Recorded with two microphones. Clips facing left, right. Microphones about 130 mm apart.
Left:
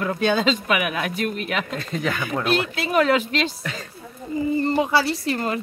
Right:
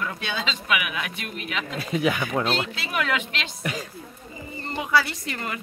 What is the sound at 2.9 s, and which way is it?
Speech, 35° left (ahead or behind).